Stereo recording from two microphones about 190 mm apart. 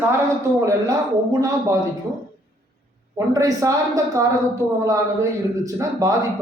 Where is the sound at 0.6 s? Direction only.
15° right (ahead or behind).